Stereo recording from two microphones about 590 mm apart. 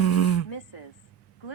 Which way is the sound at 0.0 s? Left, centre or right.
Left.